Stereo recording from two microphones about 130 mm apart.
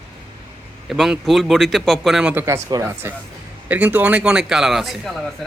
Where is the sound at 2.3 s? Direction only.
20° right (ahead or behind).